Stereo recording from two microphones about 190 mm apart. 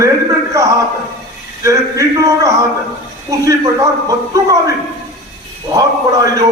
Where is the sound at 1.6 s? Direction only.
15° right (ahead or behind).